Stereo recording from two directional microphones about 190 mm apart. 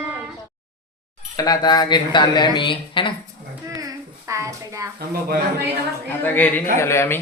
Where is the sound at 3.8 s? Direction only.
15° right (ahead or behind).